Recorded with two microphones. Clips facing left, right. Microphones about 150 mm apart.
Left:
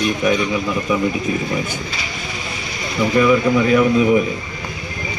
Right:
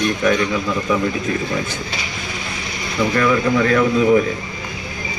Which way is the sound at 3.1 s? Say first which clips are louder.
Left 3 dB; 15° left (ahead or behind).